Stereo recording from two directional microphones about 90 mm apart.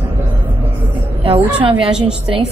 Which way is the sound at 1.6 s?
75° right (ahead or behind).